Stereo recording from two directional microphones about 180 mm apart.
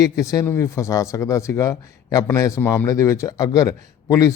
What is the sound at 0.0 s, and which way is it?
Speech, 20° left (ahead or behind).